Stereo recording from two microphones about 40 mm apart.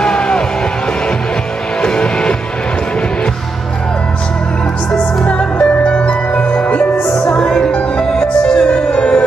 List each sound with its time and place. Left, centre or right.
0.0 s music: left
1.8 s music: left
4.9 s music: centre